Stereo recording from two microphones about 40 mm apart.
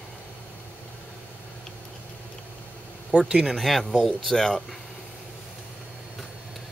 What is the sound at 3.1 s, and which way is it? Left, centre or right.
Speech, right.